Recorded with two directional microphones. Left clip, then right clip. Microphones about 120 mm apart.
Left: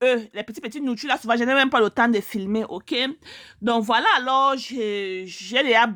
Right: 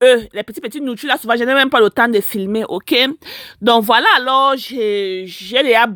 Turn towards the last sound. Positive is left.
turn(degrees=-30)  # may be behind; listen again after turning